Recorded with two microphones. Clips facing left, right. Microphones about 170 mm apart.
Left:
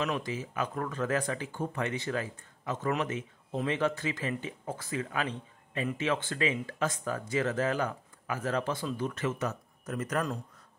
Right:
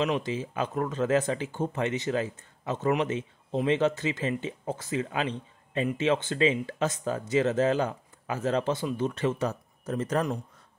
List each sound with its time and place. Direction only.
0.0 s speech: 25° right (ahead or behind)